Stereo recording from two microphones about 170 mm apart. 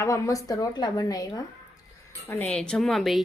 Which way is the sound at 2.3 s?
10° left (ahead or behind).